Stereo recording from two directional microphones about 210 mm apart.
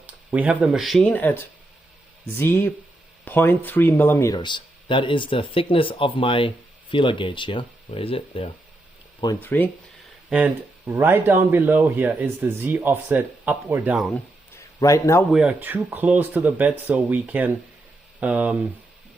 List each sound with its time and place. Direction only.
0.0 s speech: 5° right (ahead or behind); by 8.4 s 25° left (ahead or behind)
9.2 s speech: 15° left (ahead or behind)
10.2 s speech: 5° right (ahead or behind)
14.5 s a sound: 15° left (ahead or behind)
15.3 s speech: 5° right (ahead or behind)